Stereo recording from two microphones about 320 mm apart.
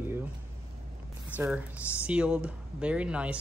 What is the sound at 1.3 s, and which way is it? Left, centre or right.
Speech, centre.